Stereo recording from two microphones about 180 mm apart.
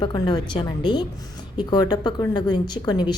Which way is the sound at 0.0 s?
25° left (ahead or behind).